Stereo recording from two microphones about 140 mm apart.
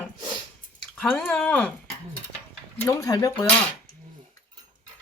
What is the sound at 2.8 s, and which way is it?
Speech, 25° left (ahead or behind).